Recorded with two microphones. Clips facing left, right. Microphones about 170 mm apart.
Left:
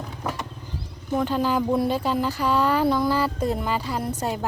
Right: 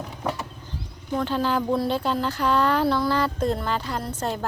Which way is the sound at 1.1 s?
5° left (ahead or behind).